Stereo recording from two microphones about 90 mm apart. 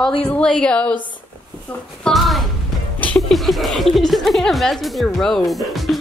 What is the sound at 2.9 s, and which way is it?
Music, 15° left (ahead or behind).